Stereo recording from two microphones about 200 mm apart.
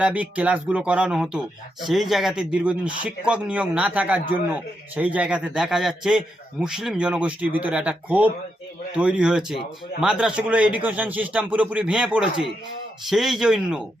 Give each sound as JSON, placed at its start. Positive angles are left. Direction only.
{"t": 0.0, "sound": "a man's voice", "side_deg": -5}